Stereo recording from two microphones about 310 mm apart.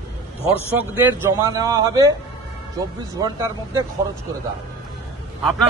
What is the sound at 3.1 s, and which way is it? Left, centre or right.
Speech, centre.